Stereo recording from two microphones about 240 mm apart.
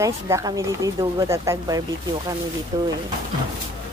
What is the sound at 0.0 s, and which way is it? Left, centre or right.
Speech, centre.